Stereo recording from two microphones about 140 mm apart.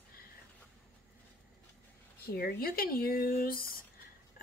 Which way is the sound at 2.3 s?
90° left.